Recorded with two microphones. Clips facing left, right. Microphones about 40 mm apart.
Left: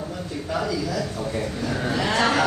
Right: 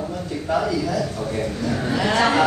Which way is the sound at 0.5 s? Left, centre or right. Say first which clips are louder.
Right 4 dB; centre.